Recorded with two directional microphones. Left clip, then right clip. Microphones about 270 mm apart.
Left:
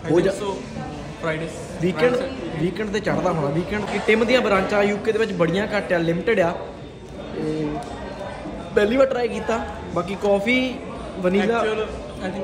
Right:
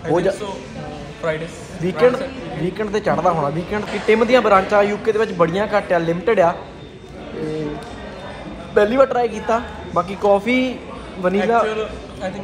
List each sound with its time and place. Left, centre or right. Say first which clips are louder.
0.1 s speech: even; centre
1.2 s a man's voice: right 4 dB; centre
1.8 s a man's voice: right 4 dB; centre
8.7 s speech: right 4 dB; centre
11.6 s a man's voice: right 2 dB; centre